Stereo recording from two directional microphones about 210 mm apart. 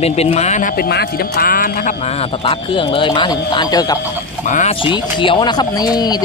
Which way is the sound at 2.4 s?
25° left (ahead or behind).